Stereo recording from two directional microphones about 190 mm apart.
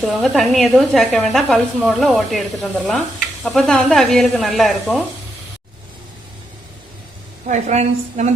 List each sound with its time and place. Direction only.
0.0 s speech: centre (ahead or behind)
7.4 s a woman's voice: 35° right (ahead or behind)